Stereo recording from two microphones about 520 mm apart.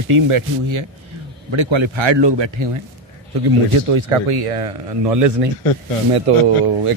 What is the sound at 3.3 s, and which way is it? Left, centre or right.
Speech, right.